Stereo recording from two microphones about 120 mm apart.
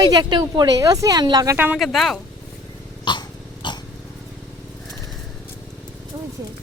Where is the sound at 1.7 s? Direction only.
Centre (ahead or behind).